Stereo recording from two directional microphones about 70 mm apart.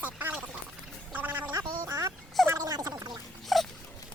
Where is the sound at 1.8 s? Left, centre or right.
Right.